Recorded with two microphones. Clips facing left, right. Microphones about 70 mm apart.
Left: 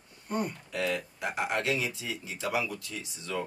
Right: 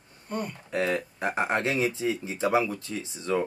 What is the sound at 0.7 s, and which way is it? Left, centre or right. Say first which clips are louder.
Speech: right 6 dB; right.